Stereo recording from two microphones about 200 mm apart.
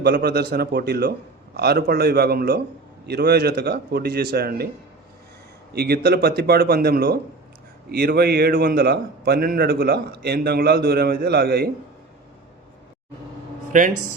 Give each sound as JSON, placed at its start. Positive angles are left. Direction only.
{"t": 0.0, "sound": "a man's voice", "side_deg": -55}
{"t": 5.7, "sound": "a man's voice", "side_deg": -50}
{"t": 13.7, "sound": "a man's voice", "side_deg": -40}